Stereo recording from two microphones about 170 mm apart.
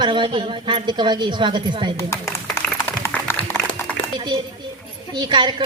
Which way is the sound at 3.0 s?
15° left (ahead or behind).